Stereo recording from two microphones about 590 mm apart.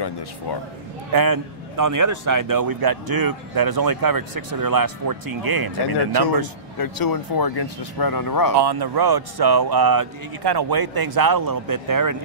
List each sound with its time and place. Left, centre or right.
1.1 s a man's voice: right
6.8 s speech: left
8.5 s a man's voice: right